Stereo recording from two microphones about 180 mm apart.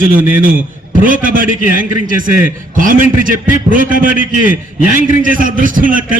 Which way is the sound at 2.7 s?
50° right (ahead or behind).